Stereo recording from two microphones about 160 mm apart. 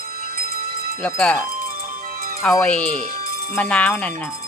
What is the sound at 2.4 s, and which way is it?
Speech, 5° left (ahead or behind).